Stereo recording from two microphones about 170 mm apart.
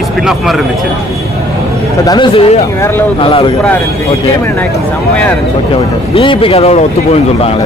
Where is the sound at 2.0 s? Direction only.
25° left (ahead or behind).